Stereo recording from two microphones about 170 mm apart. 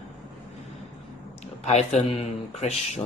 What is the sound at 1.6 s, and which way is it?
Speech, 40° left (ahead or behind).